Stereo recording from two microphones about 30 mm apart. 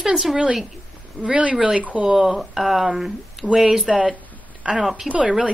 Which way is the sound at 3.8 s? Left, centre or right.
Right.